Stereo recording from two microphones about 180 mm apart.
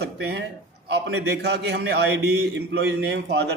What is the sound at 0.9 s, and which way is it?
A man's voice, 65° right (ahead or behind).